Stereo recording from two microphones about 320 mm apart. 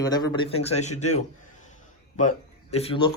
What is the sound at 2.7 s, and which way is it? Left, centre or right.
Speech, centre.